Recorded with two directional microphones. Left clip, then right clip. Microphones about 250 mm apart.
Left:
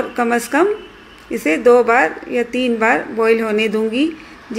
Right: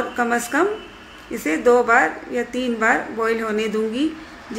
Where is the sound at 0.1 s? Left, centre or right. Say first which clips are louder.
Left 5 dB; centre.